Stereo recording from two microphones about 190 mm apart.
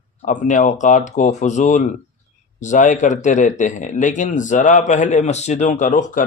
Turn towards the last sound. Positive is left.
turn(degrees=40)  # may be behind; listen again after turning